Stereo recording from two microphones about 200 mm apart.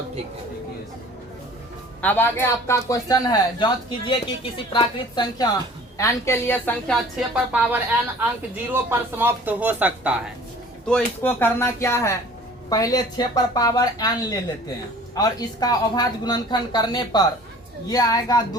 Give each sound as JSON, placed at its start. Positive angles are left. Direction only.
{"t": 2.0, "sound": "a man's voice", "side_deg": 10}
{"t": 10.8, "sound": "a man's voice", "side_deg": 5}